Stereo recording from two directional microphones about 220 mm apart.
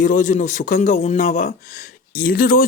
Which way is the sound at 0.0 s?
35° left (ahead or behind).